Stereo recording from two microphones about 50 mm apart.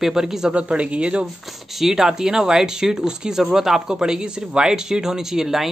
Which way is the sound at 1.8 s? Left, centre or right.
Centre.